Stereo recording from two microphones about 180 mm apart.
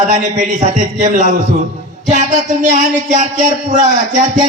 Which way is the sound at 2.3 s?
45° right (ahead or behind).